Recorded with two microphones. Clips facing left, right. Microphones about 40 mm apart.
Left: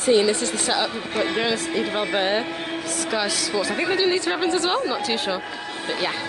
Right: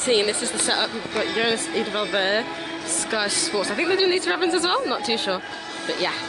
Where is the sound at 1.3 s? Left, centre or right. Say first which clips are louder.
Even; centre.